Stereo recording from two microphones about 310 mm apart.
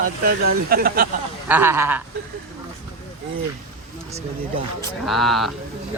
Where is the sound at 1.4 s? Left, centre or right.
Centre.